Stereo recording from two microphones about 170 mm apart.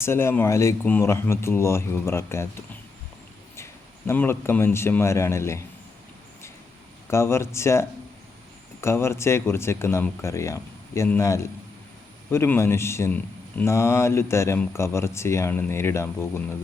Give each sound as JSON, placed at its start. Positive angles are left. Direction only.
{"t": 0.0, "sound": "a man's voice", "side_deg": 15}
{"t": 3.5, "sound": "speech", "side_deg": 15}
{"t": 7.1, "sound": "a man's voice", "side_deg": 15}